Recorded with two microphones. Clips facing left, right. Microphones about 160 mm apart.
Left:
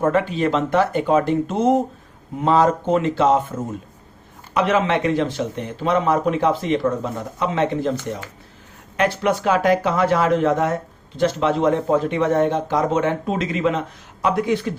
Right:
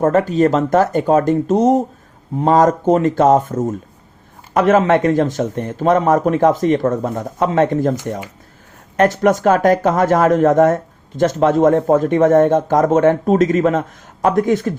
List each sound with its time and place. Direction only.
0.0 s a man's voice: 40° right (ahead or behind)